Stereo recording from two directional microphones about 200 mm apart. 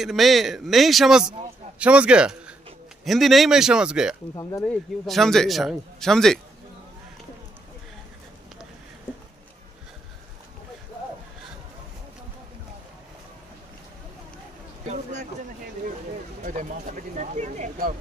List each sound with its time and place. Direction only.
0.0 s a man's voice: centre (ahead or behind)
4.4 s speech: 15° left (ahead or behind)
5.0 s a man's voice: centre (ahead or behind)
17.2 s a sound: 35° right (ahead or behind)